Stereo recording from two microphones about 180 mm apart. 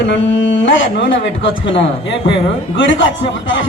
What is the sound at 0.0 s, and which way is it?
A man's voice, 90° left.